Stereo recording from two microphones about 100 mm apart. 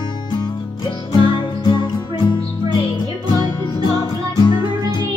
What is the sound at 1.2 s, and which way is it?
Music, 50° left (ahead or behind).